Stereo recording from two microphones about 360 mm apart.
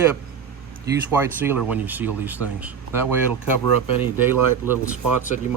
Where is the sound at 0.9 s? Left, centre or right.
Centre.